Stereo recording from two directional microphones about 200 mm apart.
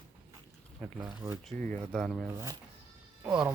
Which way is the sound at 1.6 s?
5° left (ahead or behind).